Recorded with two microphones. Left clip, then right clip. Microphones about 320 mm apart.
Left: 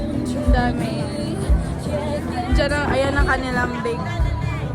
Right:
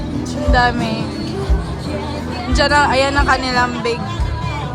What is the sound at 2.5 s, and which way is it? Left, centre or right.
Speech, centre.